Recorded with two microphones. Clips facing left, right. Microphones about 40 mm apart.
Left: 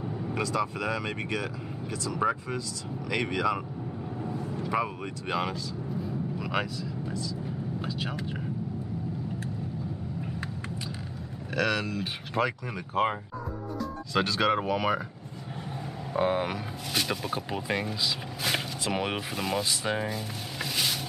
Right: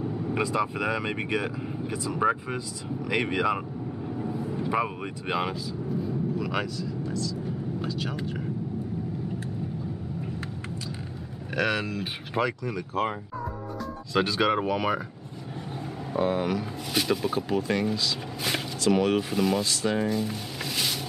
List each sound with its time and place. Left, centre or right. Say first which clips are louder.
0.0 s vehicle: right 4 dB; centre
0.3 s speech: right 2 dB; centre
5.9 s vehicle: right 5 dB; centre
7.8 s speech: right 2 dB; centre
11.5 s speech: right 1 dB; centre
12.4 s speech: right 3 dB; centre
13.7 s speech: right 2 dB; centre
16.2 s speech: right 1 dB; centre
16.9 s speech: right 4 dB; centre
18.4 s a sound: right 3 dB; centre
18.9 s speech: right 6 dB; centre
19.3 s speech: right 4 dB; centre